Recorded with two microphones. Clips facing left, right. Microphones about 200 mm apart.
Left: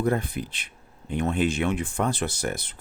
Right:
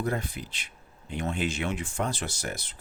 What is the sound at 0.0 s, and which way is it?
Speech, 55° left (ahead or behind).